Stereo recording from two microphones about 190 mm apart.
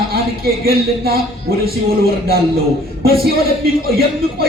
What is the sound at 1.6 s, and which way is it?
A man's voice, 55° right (ahead or behind).